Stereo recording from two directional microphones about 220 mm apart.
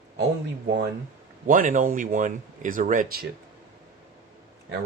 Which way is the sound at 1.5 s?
35° right (ahead or behind).